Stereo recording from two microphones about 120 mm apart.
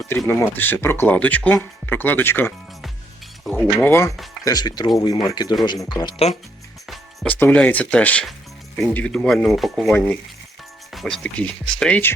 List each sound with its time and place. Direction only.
0.3 s speech: 15° left (ahead or behind)
3.8 s speech: 20° left (ahead or behind)
4.4 s speech: 35° left (ahead or behind)
6.8 s music: centre (ahead or behind)
7.3 s speech: 15° left (ahead or behind)
9.9 s speech: 10° left (ahead or behind)